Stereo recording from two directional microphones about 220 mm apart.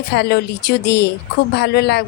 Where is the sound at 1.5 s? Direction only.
45° left (ahead or behind).